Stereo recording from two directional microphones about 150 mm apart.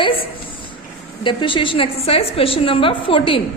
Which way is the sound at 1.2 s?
35° left (ahead or behind).